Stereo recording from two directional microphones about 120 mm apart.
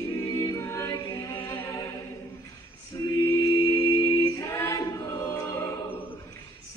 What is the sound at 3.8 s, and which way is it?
A capella, 20° left (ahead or behind).